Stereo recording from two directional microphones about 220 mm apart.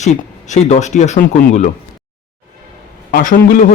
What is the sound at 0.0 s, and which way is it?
Speech, 30° left (ahead or behind).